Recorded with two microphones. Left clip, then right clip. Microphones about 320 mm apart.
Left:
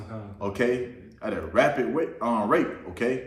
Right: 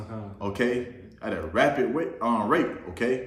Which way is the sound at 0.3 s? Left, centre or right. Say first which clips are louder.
Left 1 dB; centre.